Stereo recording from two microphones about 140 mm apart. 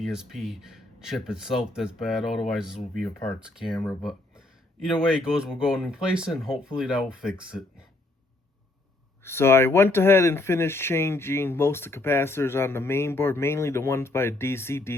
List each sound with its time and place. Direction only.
0.0 s speech: 5° right (ahead or behind)
9.2 s speech: 15° left (ahead or behind)